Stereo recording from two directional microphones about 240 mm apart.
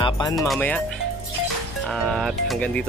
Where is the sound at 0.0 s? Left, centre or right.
Centre.